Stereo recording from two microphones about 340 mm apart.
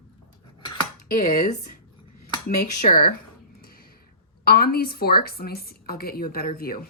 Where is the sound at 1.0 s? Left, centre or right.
Left.